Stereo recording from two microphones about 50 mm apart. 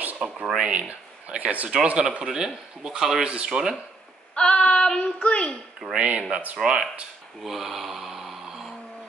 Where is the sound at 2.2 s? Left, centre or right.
Centre.